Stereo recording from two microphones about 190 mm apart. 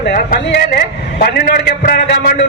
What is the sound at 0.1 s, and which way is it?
A man's voice, 50° left (ahead or behind).